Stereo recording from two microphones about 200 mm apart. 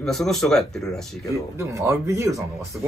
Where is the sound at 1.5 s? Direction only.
15° right (ahead or behind).